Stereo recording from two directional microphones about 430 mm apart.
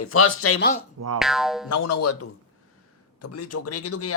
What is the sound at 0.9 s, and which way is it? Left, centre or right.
Speech, right.